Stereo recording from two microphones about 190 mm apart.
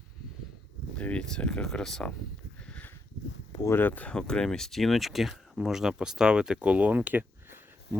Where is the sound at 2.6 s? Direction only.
5° left (ahead or behind).